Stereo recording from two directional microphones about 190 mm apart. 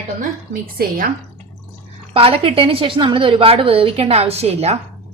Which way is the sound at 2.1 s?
30° right (ahead or behind).